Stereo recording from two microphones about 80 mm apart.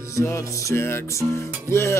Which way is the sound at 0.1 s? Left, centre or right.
Left.